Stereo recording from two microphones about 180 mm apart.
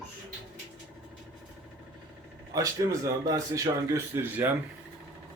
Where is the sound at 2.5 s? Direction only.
20° right (ahead or behind).